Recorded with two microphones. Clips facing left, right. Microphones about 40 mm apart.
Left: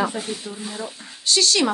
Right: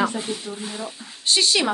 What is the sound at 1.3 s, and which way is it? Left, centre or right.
Speech, centre.